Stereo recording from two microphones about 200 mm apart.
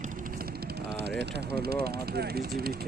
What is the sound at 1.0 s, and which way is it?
Speech, 55° right (ahead or behind).